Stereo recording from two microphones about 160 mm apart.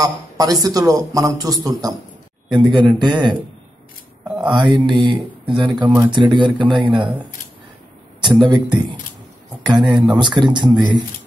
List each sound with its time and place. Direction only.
0.0 s a man's voice: 20° right (ahead or behind)
4.5 s a man's voice: 30° right (ahead or behind)
8.2 s a man's voice: 30° right (ahead or behind)